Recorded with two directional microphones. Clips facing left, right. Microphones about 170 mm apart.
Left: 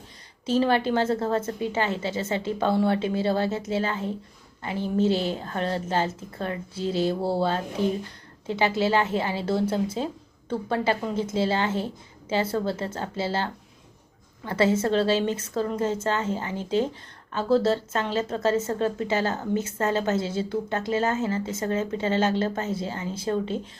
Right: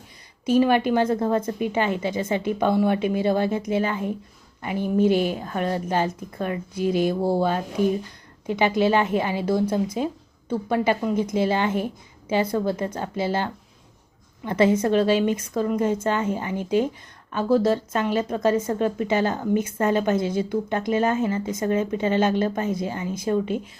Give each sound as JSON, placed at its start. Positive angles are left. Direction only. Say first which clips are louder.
{"t": 0.4, "sound": "a woman's voice", "louder": "right 3 dB", "side_deg": -15}